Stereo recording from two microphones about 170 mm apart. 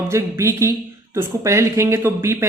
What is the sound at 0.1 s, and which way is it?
Speech, 15° right (ahead or behind).